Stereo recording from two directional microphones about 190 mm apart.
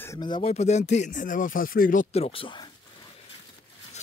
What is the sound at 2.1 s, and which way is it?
Speech, 30° left (ahead or behind).